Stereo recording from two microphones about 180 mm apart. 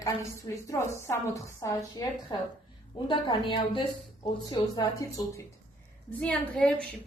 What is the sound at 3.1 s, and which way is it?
A woman's voice, 25° left (ahead or behind).